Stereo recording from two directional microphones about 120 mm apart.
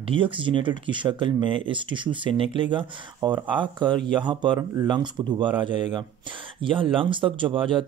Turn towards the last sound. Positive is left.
turn(degrees=-45)  # may be behind; listen again after turning